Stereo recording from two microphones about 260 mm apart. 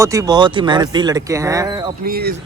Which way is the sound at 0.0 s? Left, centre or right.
Centre.